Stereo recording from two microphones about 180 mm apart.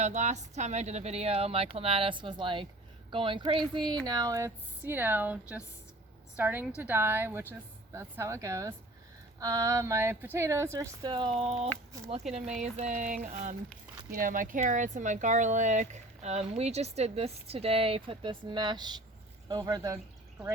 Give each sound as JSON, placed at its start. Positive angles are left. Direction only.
{"t": 0.0, "sound": "speech", "side_deg": -40}
{"t": 12.5, "sound": "a sound", "side_deg": -40}
{"t": 14.1, "sound": "speech", "side_deg": -50}